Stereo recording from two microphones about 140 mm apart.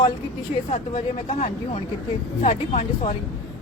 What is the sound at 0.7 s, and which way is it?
Speech, 50° left (ahead or behind).